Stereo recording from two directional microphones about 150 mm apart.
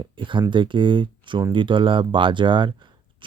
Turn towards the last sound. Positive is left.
turn(degrees=-35)  # may be behind; listen again after turning